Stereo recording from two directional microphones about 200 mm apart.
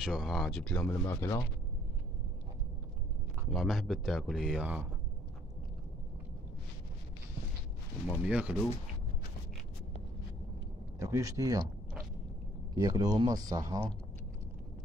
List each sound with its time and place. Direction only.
0.0 s speech: centre (ahead or behind); by 1.4 s 15° left (ahead or behind)
3.4 s speech: centre (ahead or behind)
8.3 s speech: 5° right (ahead or behind)
11.0 s speech: 15° right (ahead or behind)
12.7 s speech: 20° right (ahead or behind)